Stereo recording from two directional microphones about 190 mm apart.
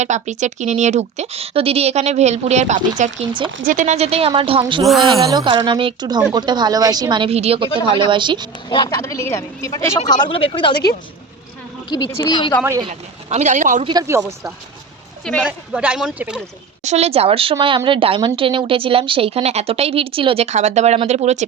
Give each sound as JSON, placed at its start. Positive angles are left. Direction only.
{"t": 0.0, "sound": "speech", "side_deg": -40}
{"t": 3.6, "sound": "speech", "side_deg": -40}
{"t": 4.8, "sound": "speech", "side_deg": 0}
{"t": 5.3, "sound": "speech", "side_deg": -20}
{"t": 8.7, "sound": "speech", "side_deg": 20}
{"t": 10.2, "sound": "speech", "side_deg": 25}
{"t": 11.9, "sound": "speech", "side_deg": 20}
{"t": 12.9, "sound": "speech", "side_deg": -35}
{"t": 13.8, "sound": "a man's voice", "side_deg": -20}
{"t": 15.2, "sound": "speech", "side_deg": 5}
{"t": 15.4, "sound": "a man's voice", "side_deg": -5}
{"t": 16.8, "sound": "speech", "side_deg": -35}